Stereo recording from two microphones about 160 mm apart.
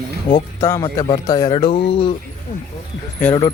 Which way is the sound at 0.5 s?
20° left (ahead or behind).